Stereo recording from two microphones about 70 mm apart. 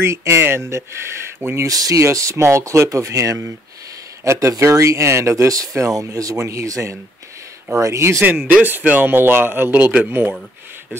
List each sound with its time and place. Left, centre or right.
0.0 s speech: right
1.7 s speech: right
8.2 s speech: right